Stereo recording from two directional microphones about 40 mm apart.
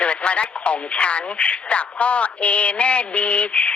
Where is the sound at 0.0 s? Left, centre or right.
Left.